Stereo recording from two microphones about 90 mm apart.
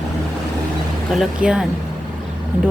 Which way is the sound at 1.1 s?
5° right (ahead or behind).